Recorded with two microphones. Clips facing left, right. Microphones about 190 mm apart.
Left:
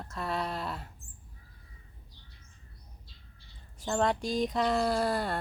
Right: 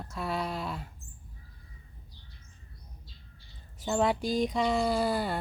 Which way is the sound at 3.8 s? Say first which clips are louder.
Right 1 dB; 5° right (ahead or behind).